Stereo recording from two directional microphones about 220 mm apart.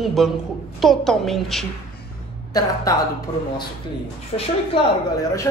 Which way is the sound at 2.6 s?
15° left (ahead or behind).